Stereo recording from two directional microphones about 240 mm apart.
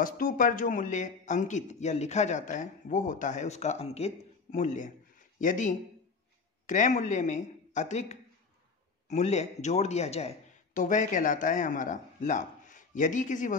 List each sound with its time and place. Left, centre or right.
0.0 s a woman's voice: left